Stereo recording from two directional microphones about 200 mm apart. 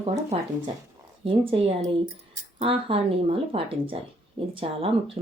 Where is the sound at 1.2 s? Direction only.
25° right (ahead or behind).